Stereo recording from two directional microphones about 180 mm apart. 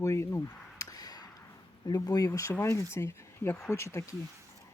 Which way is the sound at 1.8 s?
20° left (ahead or behind).